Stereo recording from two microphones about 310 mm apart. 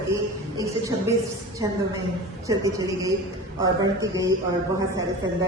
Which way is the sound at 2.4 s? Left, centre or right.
Centre.